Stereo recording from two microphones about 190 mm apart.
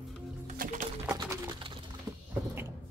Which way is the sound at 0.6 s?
45° right (ahead or behind).